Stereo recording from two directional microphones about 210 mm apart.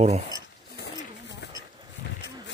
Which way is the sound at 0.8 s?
55° left (ahead or behind).